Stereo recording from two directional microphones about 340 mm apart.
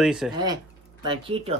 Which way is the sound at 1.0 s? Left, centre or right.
Centre.